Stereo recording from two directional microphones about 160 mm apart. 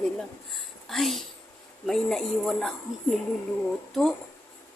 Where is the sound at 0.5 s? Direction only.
Centre (ahead or behind).